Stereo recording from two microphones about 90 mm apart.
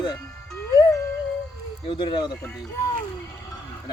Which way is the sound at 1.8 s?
75° left (ahead or behind).